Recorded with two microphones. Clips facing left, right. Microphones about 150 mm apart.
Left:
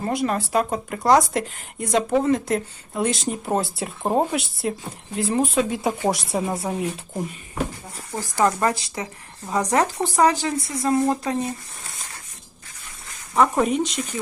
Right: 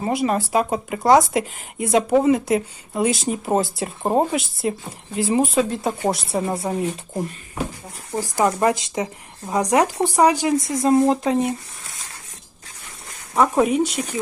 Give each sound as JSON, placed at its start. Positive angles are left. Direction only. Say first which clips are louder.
{"t": 0.0, "sound": "speech", "louder": "right 2 dB", "side_deg": -5}
{"t": 8.1, "sound": "speech", "louder": "right 1 dB", "side_deg": -15}
{"t": 10.7, "sound": "speech", "louder": "right 3 dB", "side_deg": -30}
{"t": 13.3, "sound": "speech", "louder": "right 2 dB", "side_deg": -10}